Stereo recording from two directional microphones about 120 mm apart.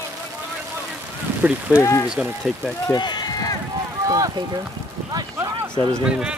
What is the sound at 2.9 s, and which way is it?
Run, 35° left (ahead or behind).